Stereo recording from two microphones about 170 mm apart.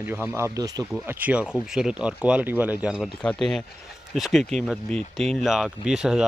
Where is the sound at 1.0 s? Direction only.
10° right (ahead or behind).